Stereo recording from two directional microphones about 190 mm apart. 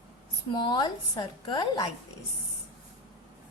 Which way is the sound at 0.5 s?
25° left (ahead or behind).